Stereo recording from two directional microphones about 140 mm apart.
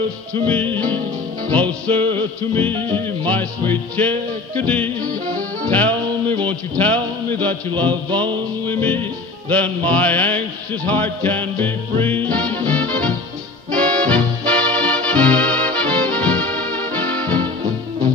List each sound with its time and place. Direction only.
1.5 s music: 10° left (ahead or behind)
5.2 s music: 65° right (ahead or behind)
5.7 s music: 10° left (ahead or behind)